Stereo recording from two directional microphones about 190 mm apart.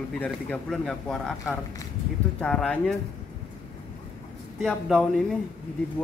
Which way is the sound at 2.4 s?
5° left (ahead or behind).